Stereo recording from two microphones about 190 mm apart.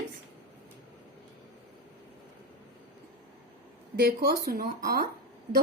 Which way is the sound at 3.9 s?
55° right (ahead or behind).